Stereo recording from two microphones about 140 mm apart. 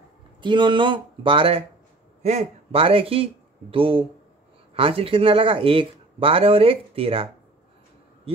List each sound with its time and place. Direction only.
0.4 s speech: 35° right (ahead or behind)